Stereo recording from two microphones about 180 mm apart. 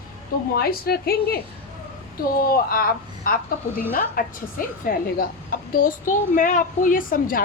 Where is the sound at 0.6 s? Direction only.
60° left (ahead or behind).